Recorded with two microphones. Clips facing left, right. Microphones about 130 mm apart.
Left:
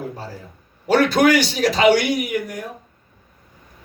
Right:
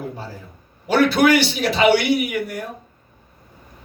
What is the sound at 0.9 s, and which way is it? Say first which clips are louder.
A man's voice: even; 45° left (ahead or behind).